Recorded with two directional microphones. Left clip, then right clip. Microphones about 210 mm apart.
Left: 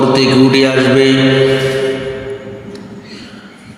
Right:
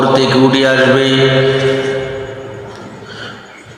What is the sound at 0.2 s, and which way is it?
Speech, 30° left (ahead or behind).